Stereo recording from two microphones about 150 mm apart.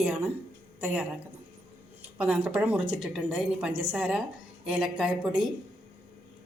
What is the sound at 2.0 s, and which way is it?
A woman's voice, 10° right (ahead or behind).